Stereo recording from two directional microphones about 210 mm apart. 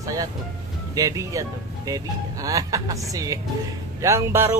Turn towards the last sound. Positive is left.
turn(degrees=-10)  # may be behind; listen again after turning